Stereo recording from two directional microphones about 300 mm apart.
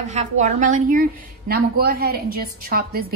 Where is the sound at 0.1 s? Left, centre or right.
Right.